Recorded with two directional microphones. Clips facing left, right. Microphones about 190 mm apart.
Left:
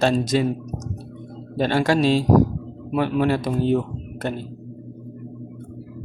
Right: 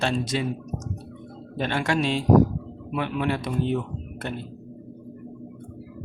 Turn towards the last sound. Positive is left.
turn(degrees=40)  # may be behind; listen again after turning